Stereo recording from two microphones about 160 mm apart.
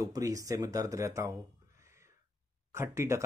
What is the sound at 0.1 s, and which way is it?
Speech, 20° right (ahead or behind).